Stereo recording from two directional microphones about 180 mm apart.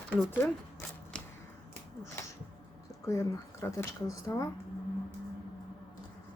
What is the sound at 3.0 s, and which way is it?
Speech, 20° left (ahead or behind).